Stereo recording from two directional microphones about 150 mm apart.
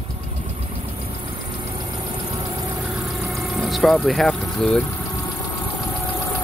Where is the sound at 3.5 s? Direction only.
Centre (ahead or behind).